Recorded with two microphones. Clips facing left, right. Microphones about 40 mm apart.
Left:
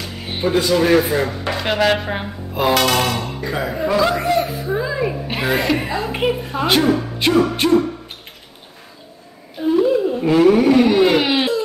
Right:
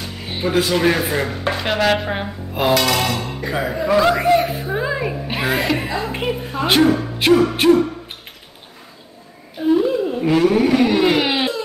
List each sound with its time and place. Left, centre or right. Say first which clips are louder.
0.6 s speech: left 1 dB; centre
0.9 s speech: left 4 dB; centre
3.3 s music: right 1 dB; centre
3.9 s speech: right 3 dB; centre
4.3 s a woman's voice: right 2 dB; right
5.0 s speech: left 1 dB; centre
6.6 s speech: right 1 dB; centre
9.6 s a sound: left 1 dB; centre